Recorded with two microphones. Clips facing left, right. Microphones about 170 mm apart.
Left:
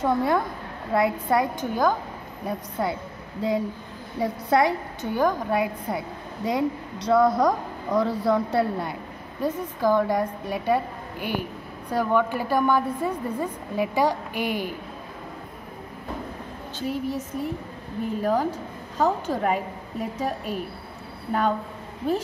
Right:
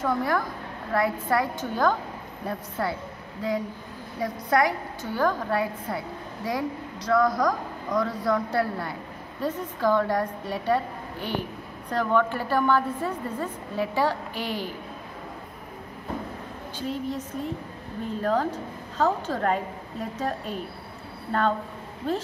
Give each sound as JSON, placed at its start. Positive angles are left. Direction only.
{"t": 0.0, "sound": "a woman's voice", "side_deg": 25}
{"t": 4.2, "sound": "a woman's voice", "side_deg": 25}
{"t": 16.8, "sound": "a woman's voice", "side_deg": 10}